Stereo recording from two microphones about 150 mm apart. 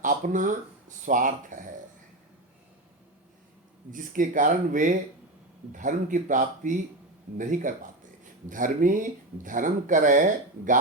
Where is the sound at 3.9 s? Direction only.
65° right (ahead or behind).